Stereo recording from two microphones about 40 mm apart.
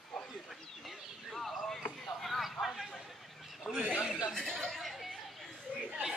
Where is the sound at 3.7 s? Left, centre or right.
Left.